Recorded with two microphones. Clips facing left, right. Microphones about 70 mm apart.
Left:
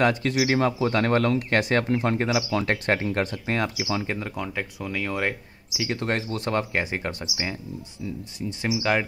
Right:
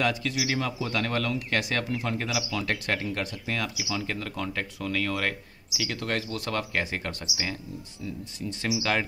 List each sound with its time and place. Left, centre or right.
0.0 s speech: left; by 9.0 s centre